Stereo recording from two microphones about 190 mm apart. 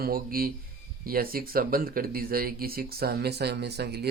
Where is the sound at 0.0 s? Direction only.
50° right (ahead or behind).